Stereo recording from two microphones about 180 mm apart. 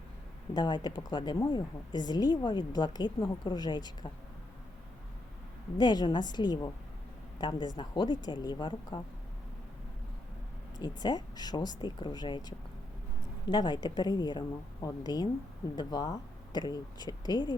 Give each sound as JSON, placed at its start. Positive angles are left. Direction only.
{"t": 0.5, "sound": "a woman's voice", "side_deg": 25}
{"t": 5.7, "sound": "a woman's voice", "side_deg": 25}
{"t": 10.8, "sound": "a woman's voice", "side_deg": 25}